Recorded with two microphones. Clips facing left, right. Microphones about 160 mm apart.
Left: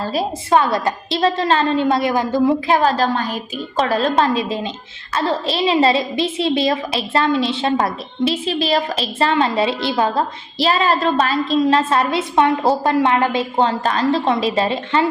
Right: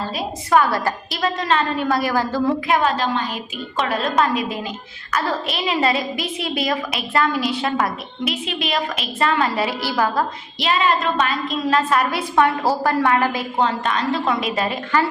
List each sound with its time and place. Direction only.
0.1 s a woman's voice: 30° left (ahead or behind)
2.6 s a woman's voice: 35° left (ahead or behind)